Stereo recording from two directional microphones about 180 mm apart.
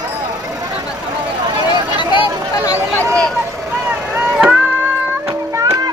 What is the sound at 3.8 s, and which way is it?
Vehicle, 15° right (ahead or behind).